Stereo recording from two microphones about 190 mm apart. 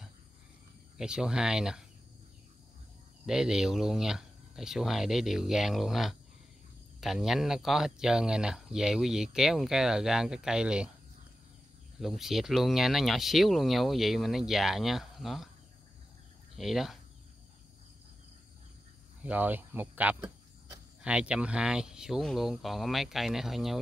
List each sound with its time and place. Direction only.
0.9 s speech: 5° right (ahead or behind)
3.3 s speech: 5° right (ahead or behind)
12.0 s speech: centre (ahead or behind)
16.5 s speech: centre (ahead or behind)
19.2 s speech: 10° right (ahead or behind)